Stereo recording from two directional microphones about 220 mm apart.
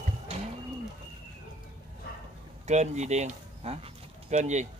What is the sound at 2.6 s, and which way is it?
Speech, 30° right (ahead or behind).